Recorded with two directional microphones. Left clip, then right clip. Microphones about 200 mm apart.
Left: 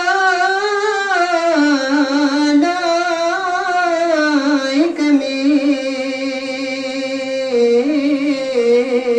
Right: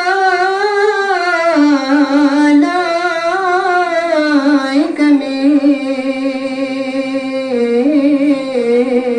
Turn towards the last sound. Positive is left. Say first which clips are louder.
# left 1 dB
turn(degrees=15)  # may be behind; listen again after turning